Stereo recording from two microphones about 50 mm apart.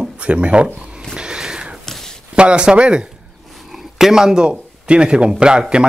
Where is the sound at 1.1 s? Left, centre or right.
Centre.